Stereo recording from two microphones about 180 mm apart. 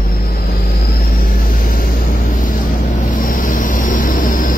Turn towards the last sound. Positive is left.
turn(degrees=50)  # may be behind; listen again after turning